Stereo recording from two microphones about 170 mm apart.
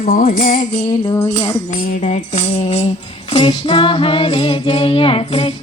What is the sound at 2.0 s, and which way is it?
Music, 40° left (ahead or behind).